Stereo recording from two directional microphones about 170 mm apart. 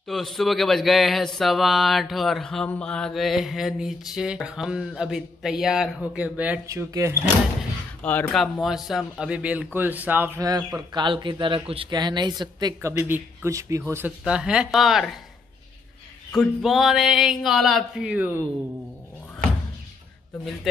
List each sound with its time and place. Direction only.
0.0 s speech: centre (ahead or behind)
6.7 s speech: 20° right (ahead or behind)
8.0 s speech: 10° left (ahead or behind); by 12.9 s 25° right (ahead or behind)
12.9 s speech: 15° right (ahead or behind)
16.3 s speech: centre (ahead or behind)